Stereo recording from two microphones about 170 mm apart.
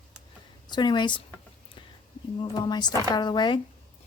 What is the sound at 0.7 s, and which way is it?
Speech, 25° left (ahead or behind).